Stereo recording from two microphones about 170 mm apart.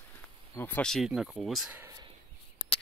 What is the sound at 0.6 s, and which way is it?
Speech, 10° left (ahead or behind).